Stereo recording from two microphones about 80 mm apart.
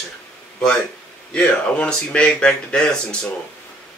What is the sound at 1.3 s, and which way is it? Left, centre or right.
Speech, centre.